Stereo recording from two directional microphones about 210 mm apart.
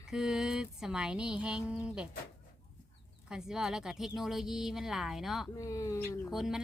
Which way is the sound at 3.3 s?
5° right (ahead or behind).